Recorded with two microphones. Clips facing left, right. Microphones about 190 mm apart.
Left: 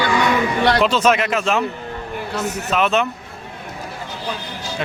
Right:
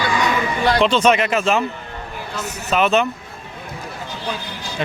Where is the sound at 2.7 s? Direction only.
Centre (ahead or behind).